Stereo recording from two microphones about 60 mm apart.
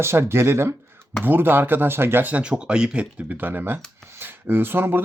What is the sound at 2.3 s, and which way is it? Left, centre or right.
Speech, centre.